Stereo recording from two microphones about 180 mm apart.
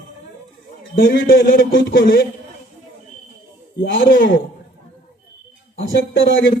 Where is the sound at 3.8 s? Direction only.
50° left (ahead or behind).